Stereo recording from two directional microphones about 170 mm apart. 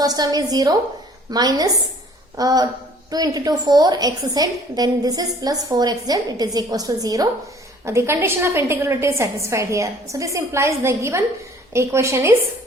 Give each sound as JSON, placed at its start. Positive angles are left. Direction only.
{"t": 0.0, "sound": "a woman's voice", "side_deg": -20}